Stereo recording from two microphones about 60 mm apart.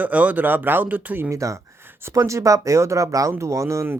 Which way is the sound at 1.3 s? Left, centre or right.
Right.